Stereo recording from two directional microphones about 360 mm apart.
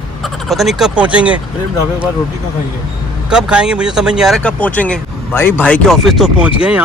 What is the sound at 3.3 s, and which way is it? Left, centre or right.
Speech, centre.